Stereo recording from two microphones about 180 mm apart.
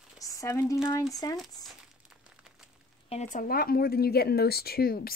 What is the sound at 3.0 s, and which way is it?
Speech, 40° left (ahead or behind).